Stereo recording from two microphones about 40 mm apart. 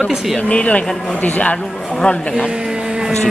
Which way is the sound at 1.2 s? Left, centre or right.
Left.